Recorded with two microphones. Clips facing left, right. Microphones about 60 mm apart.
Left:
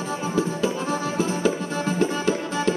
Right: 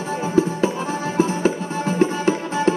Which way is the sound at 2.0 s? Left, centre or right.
Right.